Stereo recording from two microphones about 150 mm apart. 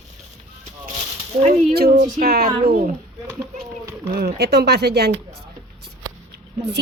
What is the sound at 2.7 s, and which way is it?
Speech, 65° right (ahead or behind).